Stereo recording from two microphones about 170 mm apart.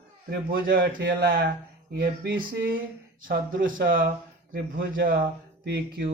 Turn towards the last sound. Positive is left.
turn(degrees=-75)  # may be behind; listen again after turning